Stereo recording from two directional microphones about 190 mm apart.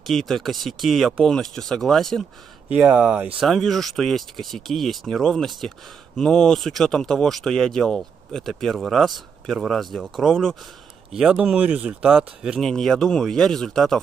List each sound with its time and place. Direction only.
0.0 s speech: centre (ahead or behind)